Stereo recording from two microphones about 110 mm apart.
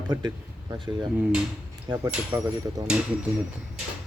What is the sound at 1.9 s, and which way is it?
Speech, 45° right (ahead or behind).